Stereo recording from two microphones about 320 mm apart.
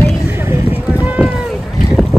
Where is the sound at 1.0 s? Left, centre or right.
Centre.